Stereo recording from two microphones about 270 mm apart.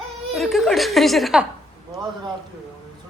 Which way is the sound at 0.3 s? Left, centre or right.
Centre.